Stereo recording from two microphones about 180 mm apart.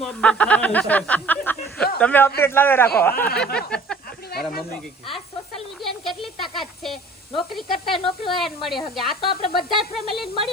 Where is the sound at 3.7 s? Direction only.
5° left (ahead or behind).